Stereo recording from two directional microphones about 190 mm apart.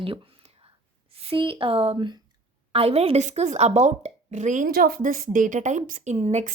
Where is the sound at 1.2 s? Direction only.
30° right (ahead or behind).